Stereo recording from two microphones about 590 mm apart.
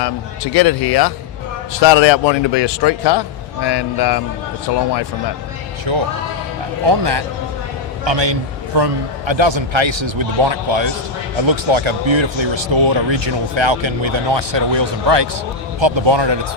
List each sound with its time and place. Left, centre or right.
0.5 s a man's voice: left
5.9 s speech: right